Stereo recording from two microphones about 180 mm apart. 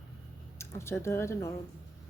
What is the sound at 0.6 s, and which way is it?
Speech, 15° left (ahead or behind).